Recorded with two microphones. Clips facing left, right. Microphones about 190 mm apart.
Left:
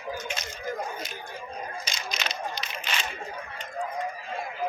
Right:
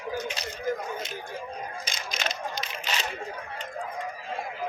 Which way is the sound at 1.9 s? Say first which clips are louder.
Right 1 dB; 50° right (ahead or behind).